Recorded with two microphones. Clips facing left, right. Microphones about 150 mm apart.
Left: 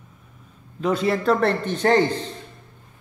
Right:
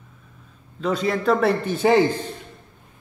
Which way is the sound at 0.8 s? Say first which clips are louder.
Left 1 dB; 5° left (ahead or behind).